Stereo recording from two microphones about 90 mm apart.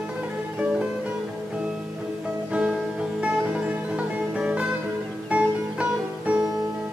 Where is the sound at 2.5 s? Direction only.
10° right (ahead or behind).